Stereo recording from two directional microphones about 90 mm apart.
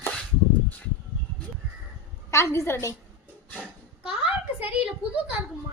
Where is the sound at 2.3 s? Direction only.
30° left (ahead or behind).